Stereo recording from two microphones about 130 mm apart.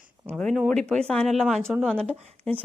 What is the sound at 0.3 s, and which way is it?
Speech, 5° left (ahead or behind).